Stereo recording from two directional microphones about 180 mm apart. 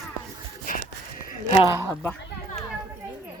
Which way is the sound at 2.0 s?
5° left (ahead or behind).